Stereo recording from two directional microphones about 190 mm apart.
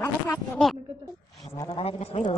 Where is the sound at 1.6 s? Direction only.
25° left (ahead or behind).